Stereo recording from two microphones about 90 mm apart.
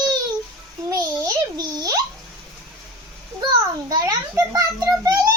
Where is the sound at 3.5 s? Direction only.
40° right (ahead or behind).